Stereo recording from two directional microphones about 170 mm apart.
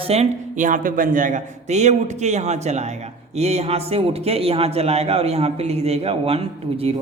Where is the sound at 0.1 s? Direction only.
45° right (ahead or behind).